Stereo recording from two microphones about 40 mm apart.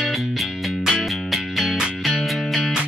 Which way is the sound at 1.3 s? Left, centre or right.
Centre.